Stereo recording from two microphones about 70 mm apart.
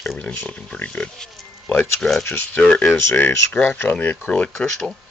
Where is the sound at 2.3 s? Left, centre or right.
Left.